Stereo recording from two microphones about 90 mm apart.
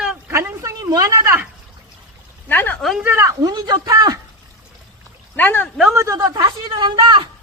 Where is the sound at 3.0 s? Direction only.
30° right (ahead or behind).